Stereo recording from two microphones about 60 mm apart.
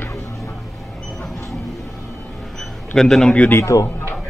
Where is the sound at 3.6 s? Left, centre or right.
Left.